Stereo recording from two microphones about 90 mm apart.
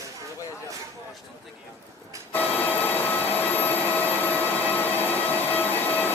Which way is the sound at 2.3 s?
20° left (ahead or behind).